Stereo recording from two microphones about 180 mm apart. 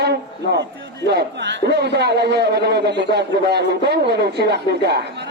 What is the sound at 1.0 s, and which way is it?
A man's voice, 70° right (ahead or behind).